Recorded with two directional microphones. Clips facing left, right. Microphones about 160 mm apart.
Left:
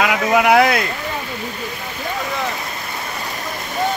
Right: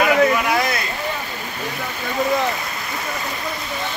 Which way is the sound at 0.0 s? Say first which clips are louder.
Even; 90° left.